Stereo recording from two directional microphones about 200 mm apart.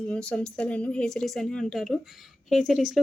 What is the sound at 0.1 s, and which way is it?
A woman's voice, 5° left (ahead or behind).